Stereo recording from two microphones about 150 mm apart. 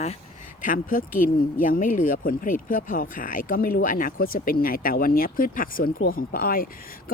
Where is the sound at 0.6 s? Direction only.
65° left (ahead or behind).